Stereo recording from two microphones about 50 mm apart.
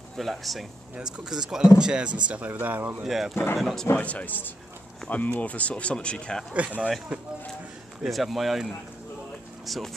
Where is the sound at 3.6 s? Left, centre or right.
Centre.